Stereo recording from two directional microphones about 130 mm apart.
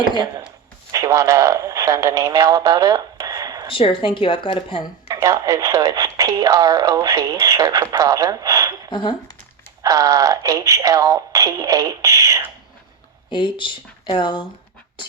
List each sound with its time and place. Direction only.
0.9 s speech: 25° right (ahead or behind)
3.7 s speech: 45° left (ahead or behind)
5.0 s speech: 25° right (ahead or behind)
8.9 s speech: 35° left (ahead or behind)
9.8 s speech: 25° right (ahead or behind)
13.3 s speech: 40° left (ahead or behind)